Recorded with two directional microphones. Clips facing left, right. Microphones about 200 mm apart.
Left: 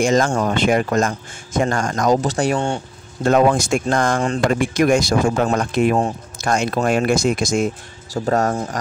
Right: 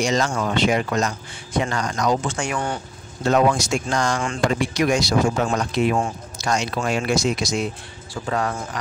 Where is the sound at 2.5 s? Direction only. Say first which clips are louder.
Left 5 dB; 25° left (ahead or behind).